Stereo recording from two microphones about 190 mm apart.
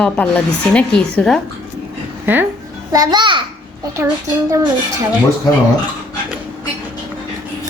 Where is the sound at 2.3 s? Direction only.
10° right (ahead or behind).